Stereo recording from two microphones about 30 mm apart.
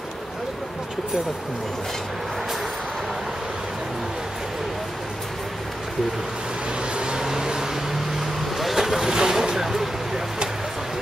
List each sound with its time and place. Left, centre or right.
7.0 s vehicle: right
7.2 s a sound: centre
8.2 s vehicle: centre
9.1 s vehicle: centre